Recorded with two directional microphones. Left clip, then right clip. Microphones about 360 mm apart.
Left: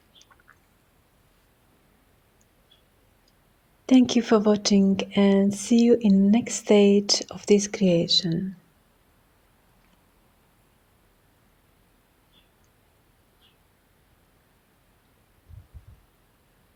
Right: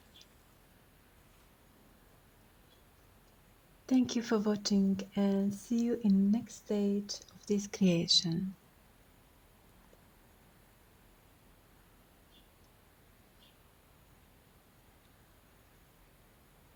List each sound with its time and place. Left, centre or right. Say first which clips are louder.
3.8 s speech: left 12 dB; right